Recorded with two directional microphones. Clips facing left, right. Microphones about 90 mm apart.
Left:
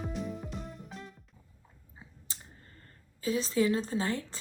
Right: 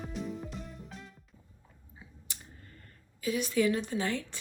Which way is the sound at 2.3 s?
30° left (ahead or behind).